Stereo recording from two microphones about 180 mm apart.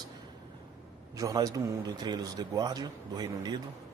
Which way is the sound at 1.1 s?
20° right (ahead or behind).